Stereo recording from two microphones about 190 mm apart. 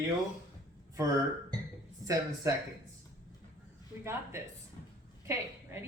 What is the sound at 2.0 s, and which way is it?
Speech, 15° right (ahead or behind).